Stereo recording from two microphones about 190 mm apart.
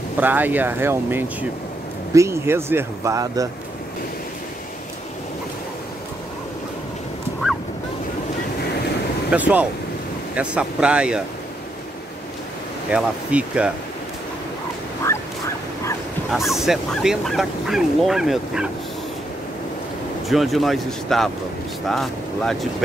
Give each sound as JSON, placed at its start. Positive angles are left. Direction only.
{"t": 0.2, "sound": "speech", "side_deg": -10}
{"t": 9.3, "sound": "speech", "side_deg": -10}
{"t": 12.9, "sound": "speech", "side_deg": -5}
{"t": 16.3, "sound": "speech", "side_deg": 0}
{"t": 20.2, "sound": "speech", "side_deg": 0}